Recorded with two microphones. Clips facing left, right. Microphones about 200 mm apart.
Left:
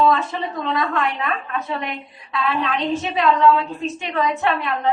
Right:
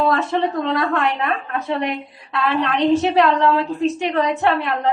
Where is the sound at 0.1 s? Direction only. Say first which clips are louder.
Right 3 dB; 75° right (ahead or behind).